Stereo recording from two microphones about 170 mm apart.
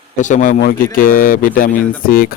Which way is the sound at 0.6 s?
60° left (ahead or behind).